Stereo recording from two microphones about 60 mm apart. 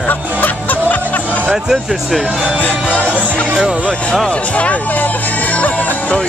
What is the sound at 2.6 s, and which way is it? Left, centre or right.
Music, left.